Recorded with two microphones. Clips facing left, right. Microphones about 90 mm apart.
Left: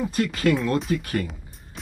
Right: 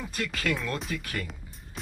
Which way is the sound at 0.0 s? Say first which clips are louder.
Left 9 dB; 30° left (ahead or behind).